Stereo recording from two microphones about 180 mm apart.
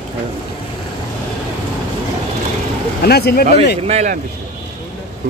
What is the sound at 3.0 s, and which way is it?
Speech, 60° left (ahead or behind).